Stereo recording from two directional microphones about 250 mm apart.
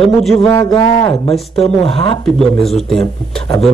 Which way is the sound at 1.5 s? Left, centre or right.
Left.